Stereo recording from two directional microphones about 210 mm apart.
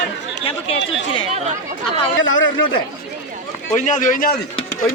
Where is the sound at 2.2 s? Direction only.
65° left (ahead or behind).